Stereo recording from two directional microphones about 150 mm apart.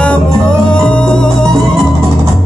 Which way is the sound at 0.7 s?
5° left (ahead or behind).